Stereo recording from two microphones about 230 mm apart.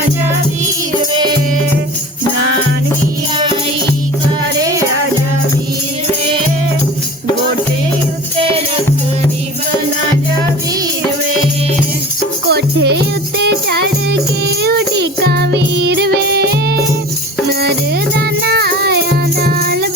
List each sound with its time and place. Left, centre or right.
4.5 s music: centre
12.5 s music: right
18.2 s music: right